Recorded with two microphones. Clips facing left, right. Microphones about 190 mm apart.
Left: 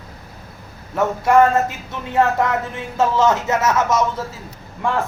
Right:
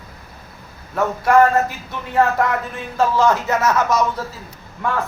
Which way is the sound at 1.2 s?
25° left (ahead or behind).